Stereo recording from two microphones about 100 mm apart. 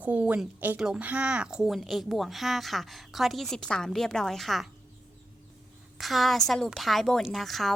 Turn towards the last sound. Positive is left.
turn(degrees=0)  # may be behind; listen again after turning